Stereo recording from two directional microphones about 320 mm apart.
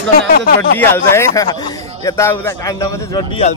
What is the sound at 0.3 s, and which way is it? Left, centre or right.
Speech, left.